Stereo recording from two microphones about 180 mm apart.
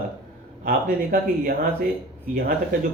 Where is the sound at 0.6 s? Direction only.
55° right (ahead or behind).